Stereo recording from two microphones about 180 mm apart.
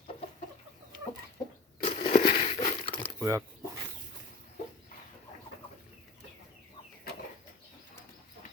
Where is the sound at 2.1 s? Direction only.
45° left (ahead or behind).